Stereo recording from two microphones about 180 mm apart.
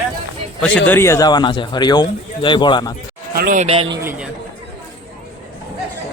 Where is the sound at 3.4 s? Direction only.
50° right (ahead or behind).